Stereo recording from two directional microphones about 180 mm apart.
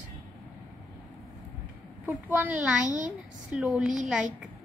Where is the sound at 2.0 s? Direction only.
10° right (ahead or behind).